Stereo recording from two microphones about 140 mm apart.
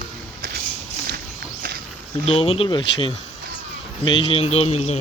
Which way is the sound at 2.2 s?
45° left (ahead or behind).